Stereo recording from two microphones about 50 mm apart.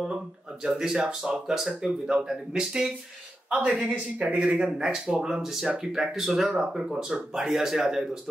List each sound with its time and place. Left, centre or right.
0.0 s a sound: centre
1.0 s speech: right
1.5 s speech: centre; by 4.4 s right
4.4 s speech: centre